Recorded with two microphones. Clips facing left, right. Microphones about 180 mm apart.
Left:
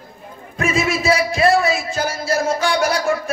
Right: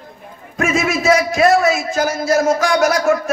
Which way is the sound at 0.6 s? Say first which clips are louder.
Right 2 dB; 35° left (ahead or behind).